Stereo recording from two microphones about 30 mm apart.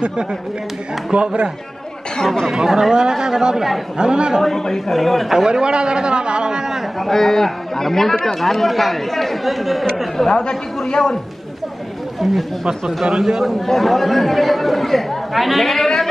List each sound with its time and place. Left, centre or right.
0.0 s speech: right
2.5 s a man's voice: centre
4.4 s a man's voice: centre
5.5 s a man's voice: right
7.0 s a man's voice: centre
12.2 s speech: centre
12.6 s a man's voice: centre
13.6 s speech: centre